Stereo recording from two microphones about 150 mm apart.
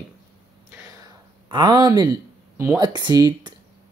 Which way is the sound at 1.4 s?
30° right (ahead or behind).